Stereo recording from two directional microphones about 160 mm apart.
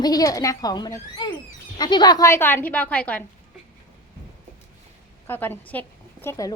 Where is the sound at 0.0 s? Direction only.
25° left (ahead or behind).